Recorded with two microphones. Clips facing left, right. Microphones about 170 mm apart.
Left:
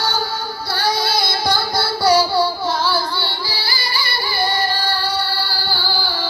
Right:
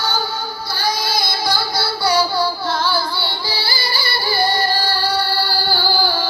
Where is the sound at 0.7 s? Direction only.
65° left (ahead or behind); by 2.4 s 40° left (ahead or behind).